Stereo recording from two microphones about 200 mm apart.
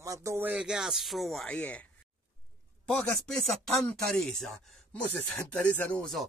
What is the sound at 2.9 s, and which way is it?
Speech, 5° left (ahead or behind).